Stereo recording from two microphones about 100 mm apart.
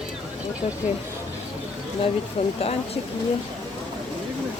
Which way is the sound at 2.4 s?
80° left.